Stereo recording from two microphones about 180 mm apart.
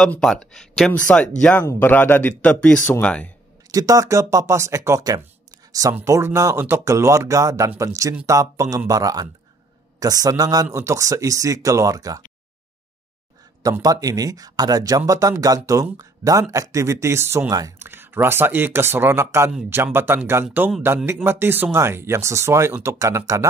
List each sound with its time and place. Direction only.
0.0 s speech: 5° left (ahead or behind)
3.7 s speech: 20° right (ahead or behind)
13.6 s speech: 20° right (ahead or behind)